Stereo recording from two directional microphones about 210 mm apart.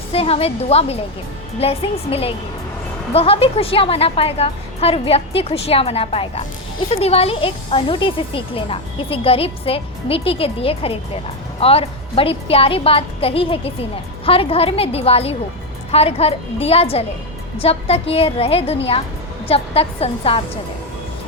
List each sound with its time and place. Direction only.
0.1 s a woman's voice: 30° left (ahead or behind)